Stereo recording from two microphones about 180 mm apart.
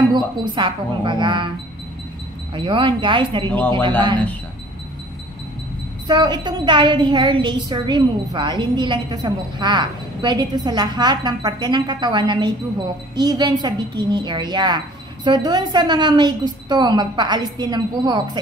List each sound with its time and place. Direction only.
0.1 s a woman's voice: 25° right (ahead or behind)
2.5 s a woman's voice: 30° right (ahead or behind)
3.4 s speech: 10° left (ahead or behind)
6.0 s a woman's voice: 25° right (ahead or behind)